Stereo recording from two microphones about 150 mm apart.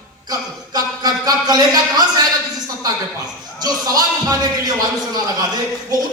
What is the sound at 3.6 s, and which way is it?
Speech, 25° right (ahead or behind).